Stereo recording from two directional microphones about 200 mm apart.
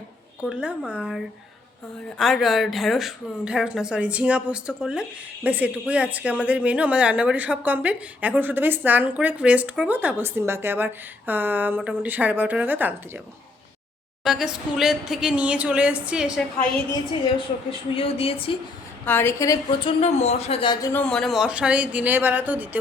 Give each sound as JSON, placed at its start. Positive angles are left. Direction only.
{"t": 0.4, "sound": "a woman's voice", "side_deg": 0}
{"t": 14.3, "sound": "a woman's voice", "side_deg": 0}
{"t": 17.3, "sound": "a woman's voice", "side_deg": 25}
{"t": 19.0, "sound": "a woman's voice", "side_deg": 10}
{"t": 20.0, "sound": "a man's voice", "side_deg": 35}
{"t": 20.9, "sound": "speech", "side_deg": 5}